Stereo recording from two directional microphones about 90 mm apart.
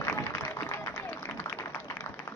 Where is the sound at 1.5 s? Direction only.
30° left (ahead or behind).